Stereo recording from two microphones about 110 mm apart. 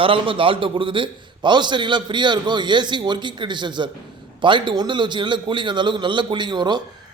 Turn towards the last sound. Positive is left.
turn(degrees=-40)  # may be behind; listen again after turning